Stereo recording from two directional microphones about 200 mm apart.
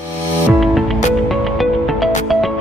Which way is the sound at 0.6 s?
Centre (ahead or behind).